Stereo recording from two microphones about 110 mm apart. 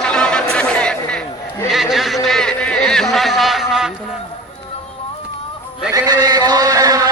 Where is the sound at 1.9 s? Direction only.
Centre (ahead or behind).